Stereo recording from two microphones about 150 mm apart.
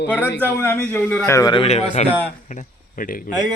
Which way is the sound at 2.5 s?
60° left (ahead or behind).